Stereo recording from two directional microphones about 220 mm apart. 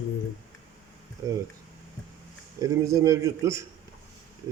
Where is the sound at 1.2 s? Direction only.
15° right (ahead or behind).